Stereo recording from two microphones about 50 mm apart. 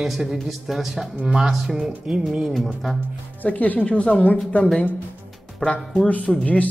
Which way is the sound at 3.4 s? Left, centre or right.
Left.